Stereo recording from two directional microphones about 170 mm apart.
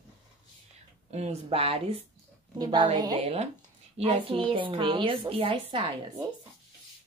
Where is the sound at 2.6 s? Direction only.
25° right (ahead or behind).